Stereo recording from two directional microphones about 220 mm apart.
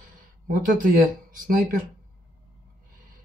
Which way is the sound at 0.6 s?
35° right (ahead or behind).